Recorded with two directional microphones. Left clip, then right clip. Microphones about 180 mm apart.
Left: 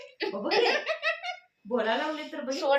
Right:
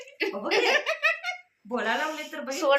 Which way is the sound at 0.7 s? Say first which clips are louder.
Right 4 dB; 25° right (ahead or behind).